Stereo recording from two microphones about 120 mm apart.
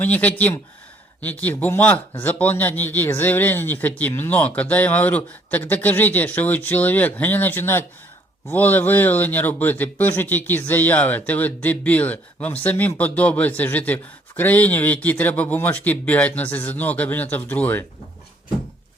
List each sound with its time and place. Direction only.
0.0 s speech: 15° left (ahead or behind)